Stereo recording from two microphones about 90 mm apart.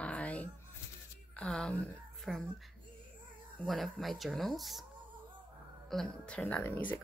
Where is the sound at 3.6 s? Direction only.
Centre (ahead or behind).